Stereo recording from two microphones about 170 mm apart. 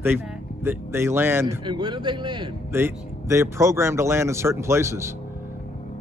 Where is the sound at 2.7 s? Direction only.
15° right (ahead or behind).